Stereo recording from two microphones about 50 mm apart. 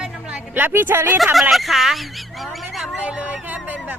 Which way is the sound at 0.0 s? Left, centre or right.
Right.